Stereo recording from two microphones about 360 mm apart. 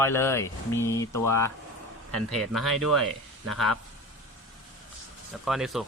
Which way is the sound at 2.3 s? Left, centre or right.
Centre.